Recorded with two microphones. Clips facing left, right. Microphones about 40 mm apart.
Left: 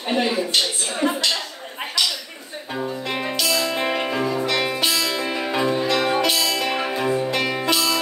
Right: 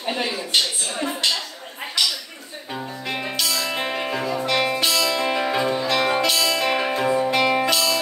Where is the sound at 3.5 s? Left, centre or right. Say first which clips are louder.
Left 5 dB; centre.